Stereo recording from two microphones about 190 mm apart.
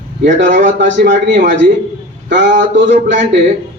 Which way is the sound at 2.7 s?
70° right (ahead or behind).